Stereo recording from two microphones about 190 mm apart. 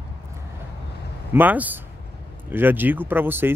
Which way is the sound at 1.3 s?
10° right (ahead or behind).